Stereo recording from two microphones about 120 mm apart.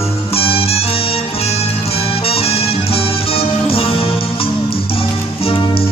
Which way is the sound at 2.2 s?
55° left (ahead or behind).